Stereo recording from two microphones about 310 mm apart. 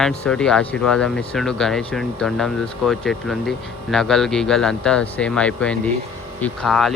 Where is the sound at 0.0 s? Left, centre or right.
Centre.